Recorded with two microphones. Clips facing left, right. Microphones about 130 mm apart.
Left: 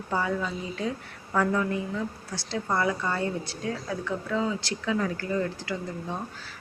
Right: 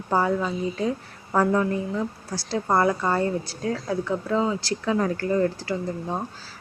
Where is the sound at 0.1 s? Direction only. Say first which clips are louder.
Right 6 dB; 40° right (ahead or behind).